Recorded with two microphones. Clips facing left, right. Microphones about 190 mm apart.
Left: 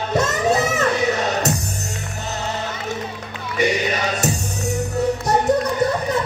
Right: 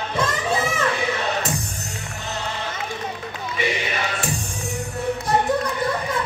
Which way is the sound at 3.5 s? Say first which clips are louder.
Left 6 dB; 40° left (ahead or behind).